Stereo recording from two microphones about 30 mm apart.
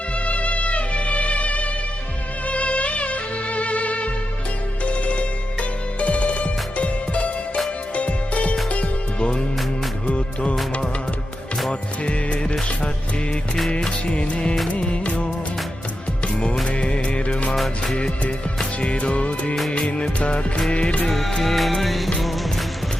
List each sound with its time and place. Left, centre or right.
0.3 s music: left
11.7 s music: left
13.7 s music: left
18.8 s music: left
21.1 s music: centre